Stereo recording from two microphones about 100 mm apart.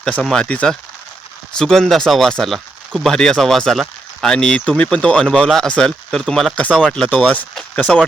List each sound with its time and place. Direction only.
0.0 s speech: 5° left (ahead or behind)
7.9 s speech: 5° left (ahead or behind)